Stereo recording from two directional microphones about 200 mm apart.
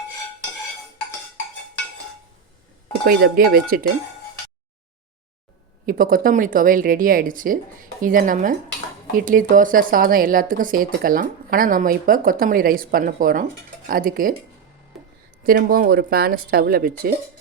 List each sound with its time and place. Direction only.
3.1 s speech: 50° right (ahead or behind)
5.8 s speech: 45° right (ahead or behind)
14.9 s a sound: centre (ahead or behind)
15.4 s speech: 45° right (ahead or behind)